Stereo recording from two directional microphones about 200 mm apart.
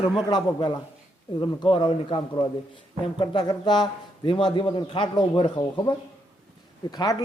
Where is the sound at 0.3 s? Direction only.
20° left (ahead or behind).